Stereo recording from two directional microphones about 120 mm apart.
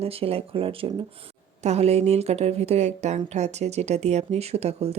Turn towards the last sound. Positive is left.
turn(degrees=-60)  # may be behind; listen again after turning